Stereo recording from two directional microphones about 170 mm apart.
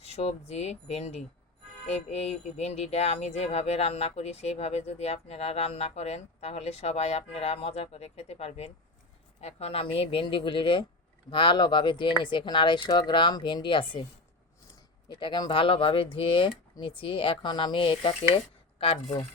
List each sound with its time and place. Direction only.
0.0 s speech: 35° left (ahead or behind)
15.1 s speech: 25° left (ahead or behind)